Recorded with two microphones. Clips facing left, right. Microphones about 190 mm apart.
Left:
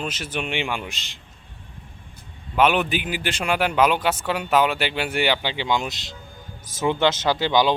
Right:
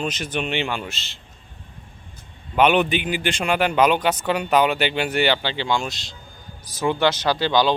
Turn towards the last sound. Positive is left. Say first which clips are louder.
# even
turn(degrees=20)  # may be behind; listen again after turning